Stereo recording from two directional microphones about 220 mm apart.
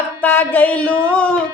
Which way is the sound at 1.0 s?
5° left (ahead or behind).